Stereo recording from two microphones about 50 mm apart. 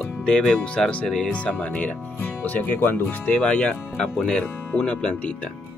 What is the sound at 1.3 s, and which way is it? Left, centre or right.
Speech, left.